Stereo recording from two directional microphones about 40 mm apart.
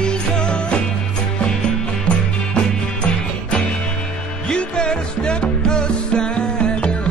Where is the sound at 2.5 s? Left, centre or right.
Left.